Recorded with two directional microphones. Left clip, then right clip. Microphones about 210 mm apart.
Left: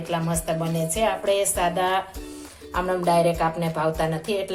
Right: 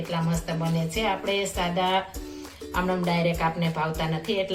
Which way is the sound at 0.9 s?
50° left (ahead or behind).